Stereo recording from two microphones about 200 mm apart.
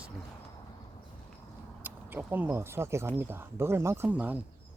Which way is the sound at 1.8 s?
10° right (ahead or behind).